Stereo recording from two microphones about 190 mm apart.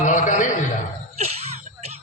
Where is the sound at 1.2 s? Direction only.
35° right (ahead or behind).